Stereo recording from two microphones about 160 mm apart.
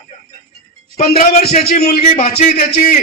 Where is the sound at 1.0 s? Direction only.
65° left (ahead or behind).